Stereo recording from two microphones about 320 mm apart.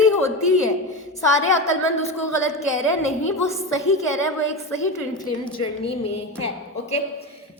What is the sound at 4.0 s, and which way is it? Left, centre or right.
A woman's voice, centre.